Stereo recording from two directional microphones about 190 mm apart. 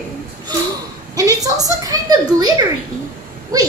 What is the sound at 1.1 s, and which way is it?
A woman's voice, 20° right (ahead or behind).